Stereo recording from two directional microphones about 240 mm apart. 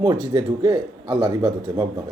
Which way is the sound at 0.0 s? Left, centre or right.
Centre.